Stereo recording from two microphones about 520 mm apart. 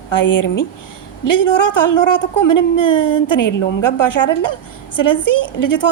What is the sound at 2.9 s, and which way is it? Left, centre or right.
Speech, left.